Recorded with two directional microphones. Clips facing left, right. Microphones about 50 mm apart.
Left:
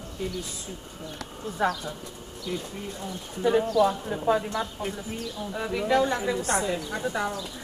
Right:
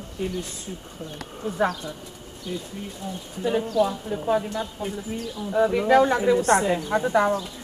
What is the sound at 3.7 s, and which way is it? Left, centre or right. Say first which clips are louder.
Speech: even; left.